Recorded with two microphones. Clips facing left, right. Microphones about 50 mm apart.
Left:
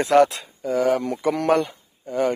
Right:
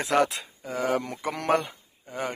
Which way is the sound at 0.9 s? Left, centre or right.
Right.